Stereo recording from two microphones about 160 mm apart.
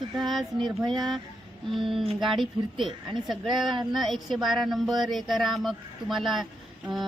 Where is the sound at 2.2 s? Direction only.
Centre (ahead or behind).